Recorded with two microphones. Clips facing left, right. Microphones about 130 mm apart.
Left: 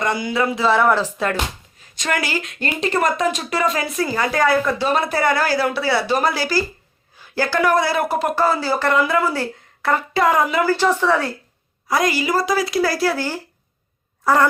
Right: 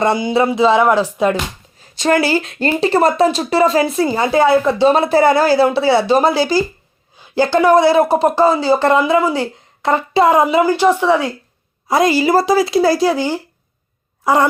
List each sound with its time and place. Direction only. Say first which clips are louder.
0.0 s speech: right 6 dB; 25° right (ahead or behind)
1.8 s speech: right 9 dB; 30° right (ahead or behind); by 11.3 s 15° right (ahead or behind)
11.9 s a woman's voice: right 6 dB; 25° right (ahead or behind)